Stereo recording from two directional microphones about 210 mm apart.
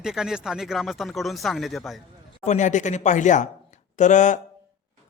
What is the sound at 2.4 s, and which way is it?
A man's voice, 35° left (ahead or behind).